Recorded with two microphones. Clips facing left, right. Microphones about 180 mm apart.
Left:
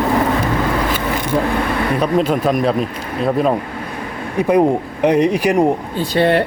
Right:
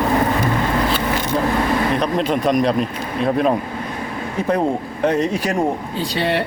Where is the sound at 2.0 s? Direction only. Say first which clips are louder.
Left 3 dB; 5° left (ahead or behind).